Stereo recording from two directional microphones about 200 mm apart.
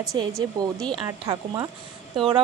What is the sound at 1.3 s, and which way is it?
Speech, 20° right (ahead or behind).